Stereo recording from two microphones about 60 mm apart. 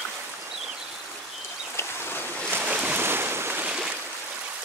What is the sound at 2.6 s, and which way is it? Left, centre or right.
Boat, right.